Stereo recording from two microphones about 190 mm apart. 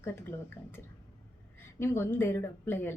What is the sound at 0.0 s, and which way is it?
A woman's voice, 10° left (ahead or behind).